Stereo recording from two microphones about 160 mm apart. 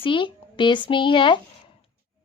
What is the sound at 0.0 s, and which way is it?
A woman's voice, 30° left (ahead or behind).